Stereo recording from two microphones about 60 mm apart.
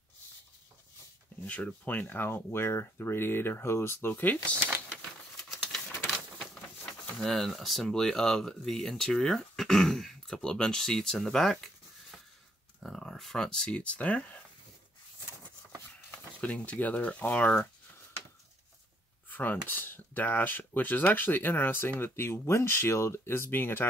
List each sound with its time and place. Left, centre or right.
1.4 s speech: left
2.2 s speech: left
4.2 s speech: left
6.3 s speech: centre
16.1 s speech: left
19.2 s speech: left